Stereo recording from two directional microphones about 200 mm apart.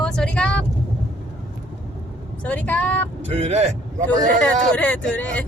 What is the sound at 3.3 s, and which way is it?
Speech, 30° right (ahead or behind).